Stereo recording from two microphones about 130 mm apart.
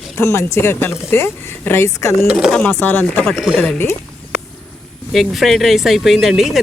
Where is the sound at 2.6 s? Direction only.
15° left (ahead or behind).